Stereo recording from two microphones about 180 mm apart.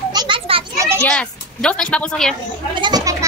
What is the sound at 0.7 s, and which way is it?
Children playing, 15° right (ahead or behind).